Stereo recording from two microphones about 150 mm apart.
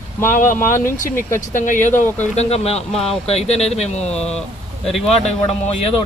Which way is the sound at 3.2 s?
45° left (ahead or behind).